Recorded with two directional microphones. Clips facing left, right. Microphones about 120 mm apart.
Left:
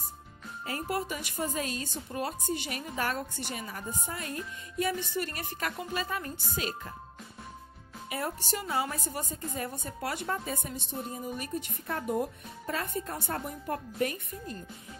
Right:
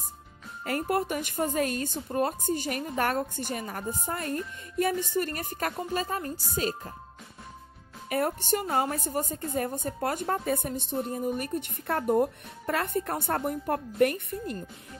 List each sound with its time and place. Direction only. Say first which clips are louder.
0.7 s a woman's voice: right 5 dB; 55° right (ahead or behind); by 6.9 s 40° right (ahead or behind)
8.1 s music: right 8 dB; 55° right (ahead or behind)
8.5 s a woman's voice: right 5 dB; 50° right (ahead or behind)